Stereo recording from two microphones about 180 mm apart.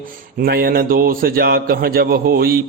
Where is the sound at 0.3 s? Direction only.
60° right (ahead or behind).